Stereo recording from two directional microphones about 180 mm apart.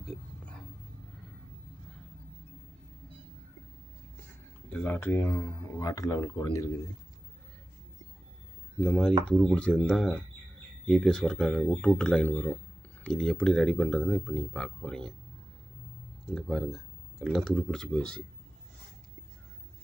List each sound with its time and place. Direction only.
4.7 s speech: 10° left (ahead or behind)
8.8 s speech: 5° left (ahead or behind)
16.2 s speech: centre (ahead or behind)